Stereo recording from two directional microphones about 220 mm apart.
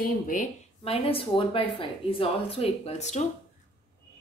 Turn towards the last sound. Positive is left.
turn(degrees=30)  # may be behind; listen again after turning